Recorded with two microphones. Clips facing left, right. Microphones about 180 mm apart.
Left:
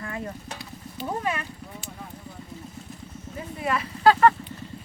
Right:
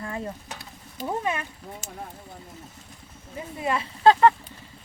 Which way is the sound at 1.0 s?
20° right (ahead or behind).